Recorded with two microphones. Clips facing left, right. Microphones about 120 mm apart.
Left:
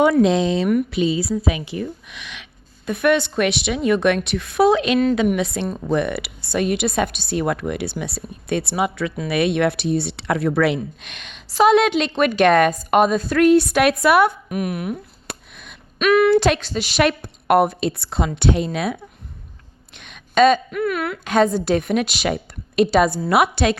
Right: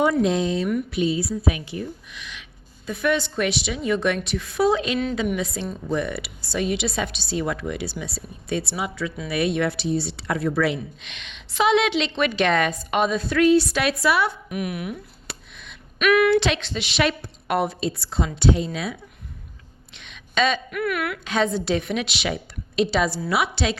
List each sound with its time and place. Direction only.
0.0 s speech: 85° left
1.7 s a woman's voice: 70° left (ahead or behind); by 15.8 s 50° left (ahead or behind)
16.0 s a woman's voice: 30° left (ahead or behind); by 18.9 s 60° left (ahead or behind)
20.0 s a sound: 50° left (ahead or behind)
20.7 s speech: 30° left (ahead or behind)
21.2 s speech: 45° left (ahead or behind)